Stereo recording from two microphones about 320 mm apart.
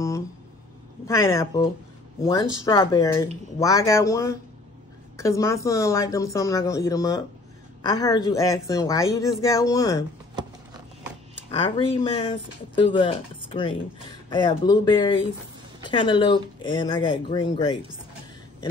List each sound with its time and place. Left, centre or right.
1.0 s speech: centre
11.5 s speech: centre